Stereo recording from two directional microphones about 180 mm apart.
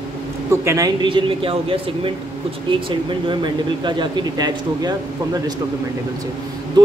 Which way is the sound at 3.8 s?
25° right (ahead or behind).